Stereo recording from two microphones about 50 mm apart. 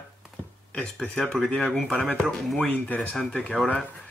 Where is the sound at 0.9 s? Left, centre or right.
Centre.